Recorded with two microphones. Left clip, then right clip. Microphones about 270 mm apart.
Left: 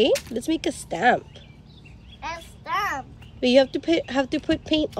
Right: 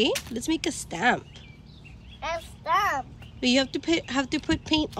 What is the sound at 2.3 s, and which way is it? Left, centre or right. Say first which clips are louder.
A child's voice: right 3 dB; centre.